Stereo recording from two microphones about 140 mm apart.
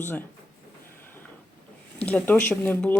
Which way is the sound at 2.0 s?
10° left (ahead or behind).